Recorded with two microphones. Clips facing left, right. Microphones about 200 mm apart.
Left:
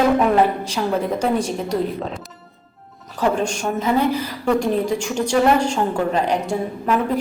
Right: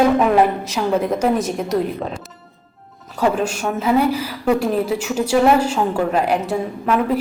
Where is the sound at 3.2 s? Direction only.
5° right (ahead or behind).